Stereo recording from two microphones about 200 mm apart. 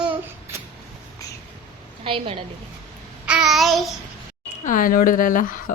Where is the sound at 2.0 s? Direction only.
25° right (ahead or behind).